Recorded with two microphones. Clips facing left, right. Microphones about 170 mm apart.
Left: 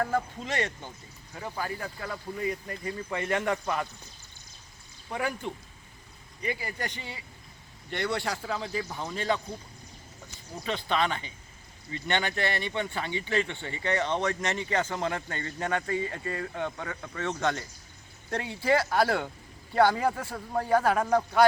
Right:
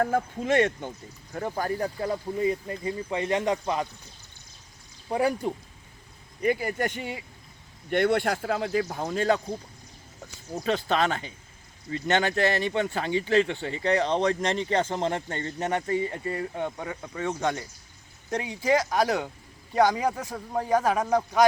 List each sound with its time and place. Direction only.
0.0 s speech: 50° right (ahead or behind); by 3.8 s 20° right (ahead or behind)
5.1 s speech: 35° right (ahead or behind)
6.4 s speech: 50° right (ahead or behind)
8.9 s speech: 45° right (ahead or behind)
10.5 s speech: 45° right (ahead or behind); by 21.4 s 15° right (ahead or behind)